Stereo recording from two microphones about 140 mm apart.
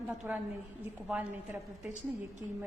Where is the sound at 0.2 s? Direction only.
15° right (ahead or behind).